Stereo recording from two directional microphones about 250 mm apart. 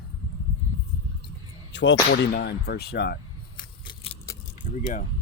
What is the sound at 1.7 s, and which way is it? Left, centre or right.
Speech, left.